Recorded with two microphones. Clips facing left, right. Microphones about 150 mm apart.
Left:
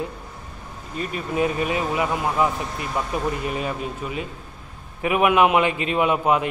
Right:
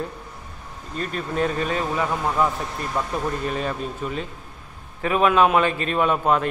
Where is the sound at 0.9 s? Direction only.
10° left (ahead or behind).